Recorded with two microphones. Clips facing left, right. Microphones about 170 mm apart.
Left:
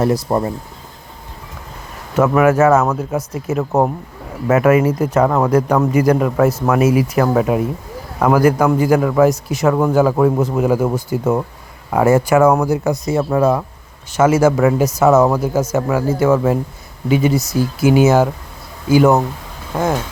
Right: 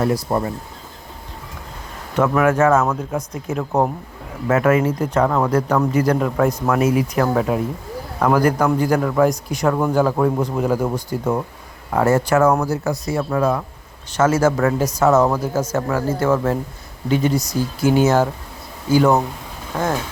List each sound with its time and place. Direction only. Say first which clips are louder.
0.0 s speech: left 3 dB; 25° left (ahead or behind)
2.1 s speech: left 4 dB; 5° left (ahead or behind); by 13.6 s 25° left (ahead or behind)
14.1 s speech: left 4 dB; 10° left (ahead or behind)